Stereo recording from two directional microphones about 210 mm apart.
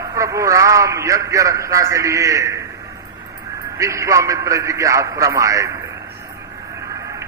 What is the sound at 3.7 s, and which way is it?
A man's voice, 15° right (ahead or behind).